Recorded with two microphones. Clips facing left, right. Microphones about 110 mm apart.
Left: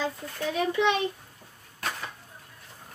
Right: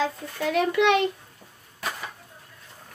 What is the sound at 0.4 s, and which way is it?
Speech, 75° right (ahead or behind).